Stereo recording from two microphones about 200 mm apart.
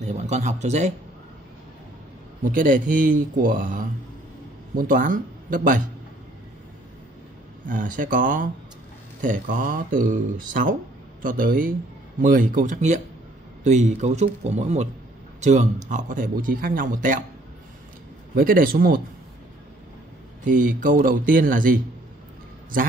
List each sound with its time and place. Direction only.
0.0 s speech: 35° right (ahead or behind)
2.5 s speech: 40° right (ahead or behind)
7.6 s speech: 40° right (ahead or behind)
18.3 s speech: 45° right (ahead or behind)
20.4 s speech: 40° right (ahead or behind)